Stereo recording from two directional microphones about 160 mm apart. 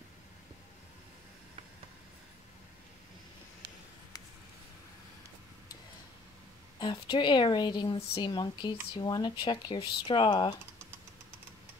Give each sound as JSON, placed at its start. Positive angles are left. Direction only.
{"t": 6.8, "sound": "speech", "side_deg": 30}